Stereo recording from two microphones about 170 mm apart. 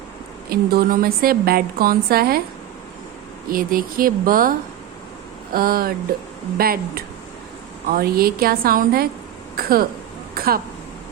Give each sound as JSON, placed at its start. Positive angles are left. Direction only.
{"t": 0.5, "sound": "a woman's voice", "side_deg": -65}
{"t": 3.5, "sound": "a woman's voice", "side_deg": -55}
{"t": 5.5, "sound": "a woman's voice", "side_deg": -60}